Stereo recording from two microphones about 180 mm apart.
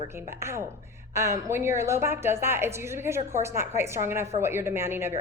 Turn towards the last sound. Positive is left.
turn(degrees=-15)  # may be behind; listen again after turning